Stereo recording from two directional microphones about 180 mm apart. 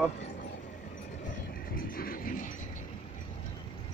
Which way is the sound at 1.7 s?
55° left (ahead or behind).